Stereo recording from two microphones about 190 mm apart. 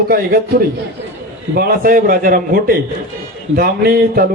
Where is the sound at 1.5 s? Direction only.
50° right (ahead or behind).